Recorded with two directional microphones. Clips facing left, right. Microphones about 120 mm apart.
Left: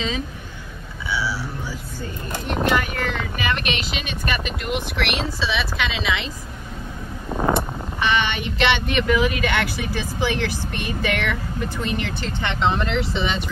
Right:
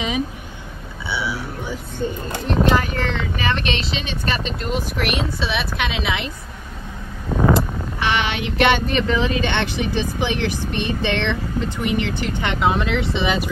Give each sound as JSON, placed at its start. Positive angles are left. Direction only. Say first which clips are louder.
{"t": 1.1, "sound": "a sound", "louder": "even", "side_deg": -20}
{"t": 2.4, "sound": "speech", "louder": "right 3 dB", "side_deg": -30}
{"t": 5.4, "sound": "speech", "louder": "right 1 dB", "side_deg": -55}
{"t": 7.2, "sound": "vehicle", "louder": "right 4 dB", "side_deg": 10}
{"t": 7.5, "sound": "a sound", "louder": "right 2 dB", "side_deg": -90}
{"t": 8.5, "sound": "speech", "louder": "right 3 dB", "side_deg": -45}
{"t": 12.7, "sound": "speech", "louder": "right 2 dB", "side_deg": 0}